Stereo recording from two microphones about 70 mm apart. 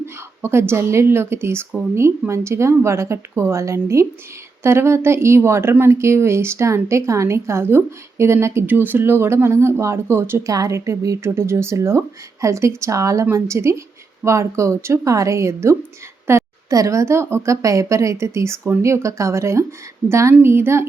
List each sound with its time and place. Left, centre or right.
0.0 s a woman's voice: right
8.6 s a woman's voice: right
10.4 s speech: right
11.2 s speech: right
16.3 s a sound: right
16.6 s speech: right
20.4 s a woman's voice: right